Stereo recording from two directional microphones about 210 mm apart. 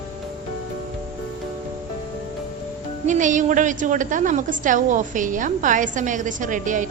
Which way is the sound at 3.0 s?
35° right (ahead or behind).